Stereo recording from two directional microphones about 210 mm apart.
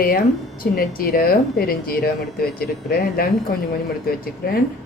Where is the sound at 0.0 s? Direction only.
45° left (ahead or behind).